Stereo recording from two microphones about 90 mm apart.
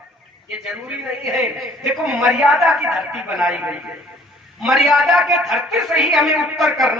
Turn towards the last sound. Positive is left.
turn(degrees=-5)  # may be behind; listen again after turning